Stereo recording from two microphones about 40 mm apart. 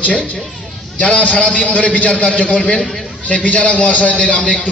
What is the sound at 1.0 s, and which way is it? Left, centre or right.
A man's voice, left.